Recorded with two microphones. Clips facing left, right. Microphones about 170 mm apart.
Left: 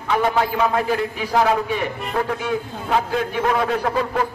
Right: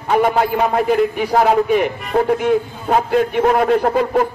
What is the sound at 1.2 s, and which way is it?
Speech, 55° right (ahead or behind).